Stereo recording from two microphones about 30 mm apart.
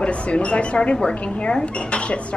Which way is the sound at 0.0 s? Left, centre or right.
Left.